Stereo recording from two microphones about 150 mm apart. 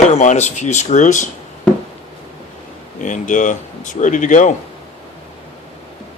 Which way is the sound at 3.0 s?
60° left (ahead or behind).